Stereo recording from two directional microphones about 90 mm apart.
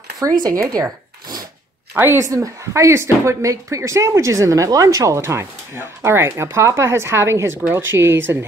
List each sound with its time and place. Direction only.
0.2 s speech: 40° right (ahead or behind)
2.0 s a woman's voice: 25° right (ahead or behind)
2.2 s speech: 35° right (ahead or behind)